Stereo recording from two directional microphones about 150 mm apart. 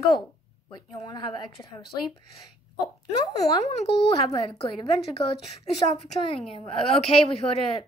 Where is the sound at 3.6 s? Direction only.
40° left (ahead or behind).